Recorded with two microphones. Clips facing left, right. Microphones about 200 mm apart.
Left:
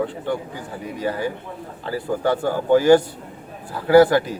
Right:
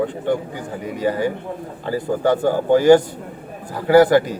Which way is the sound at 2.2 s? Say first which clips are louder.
Right 4 dB; 45° right (ahead or behind).